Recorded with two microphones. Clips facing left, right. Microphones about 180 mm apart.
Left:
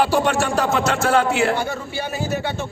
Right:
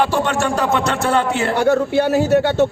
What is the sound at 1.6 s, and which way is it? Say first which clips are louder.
Speech: right 11 dB; 70° right (ahead or behind).